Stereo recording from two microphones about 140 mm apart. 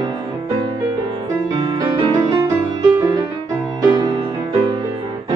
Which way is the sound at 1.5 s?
30° right (ahead or behind).